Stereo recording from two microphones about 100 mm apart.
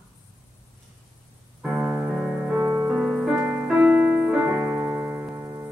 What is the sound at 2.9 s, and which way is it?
Music, 5° right (ahead or behind).